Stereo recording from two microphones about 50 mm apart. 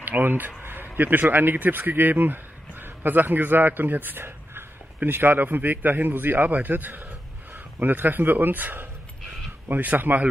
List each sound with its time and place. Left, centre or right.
0.0 s speech: right
0.6 s a sound: right
0.9 s a man's voice: right